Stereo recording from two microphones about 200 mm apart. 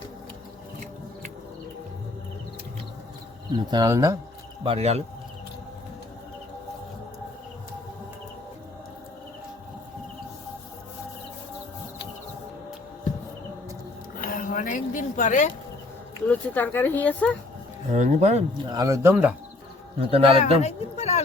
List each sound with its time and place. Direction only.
3.7 s speech: 20° right (ahead or behind)
4.6 s speech: 30° right (ahead or behind)
14.2 s a sound: 45° left (ahead or behind)
16.2 s speech: 10° left (ahead or behind)
17.9 s speech: 35° right (ahead or behind); by 19.3 s 10° right (ahead or behind)
20.0 s speech: 30° right (ahead or behind)
20.6 s speech: 35° left (ahead or behind)